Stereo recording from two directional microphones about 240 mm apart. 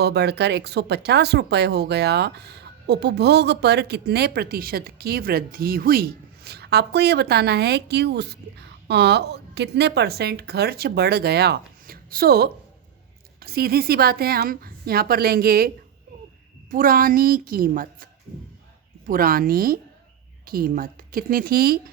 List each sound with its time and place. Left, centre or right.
0.0 s a woman's voice: right